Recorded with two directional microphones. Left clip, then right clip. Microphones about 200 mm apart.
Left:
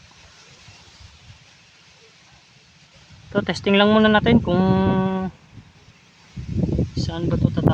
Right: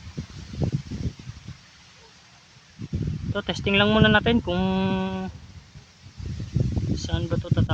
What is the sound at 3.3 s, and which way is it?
Speech, 35° left (ahead or behind).